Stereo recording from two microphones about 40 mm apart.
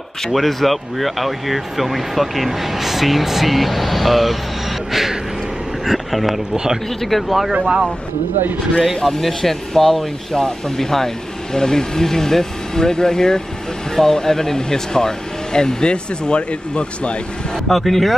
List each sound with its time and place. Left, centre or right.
0.3 s speech: centre
5.9 s speech: centre
6.5 s speech: centre
7.0 s speech: centre
7.6 s speech: centre
8.7 s speech: centre; by 17.2 s left
17.6 s speech: centre